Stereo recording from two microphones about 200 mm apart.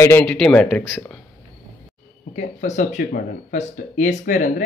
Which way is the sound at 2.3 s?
35° left (ahead or behind).